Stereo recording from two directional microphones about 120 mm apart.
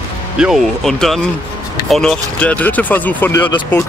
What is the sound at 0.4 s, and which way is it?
Speech, centre (ahead or behind).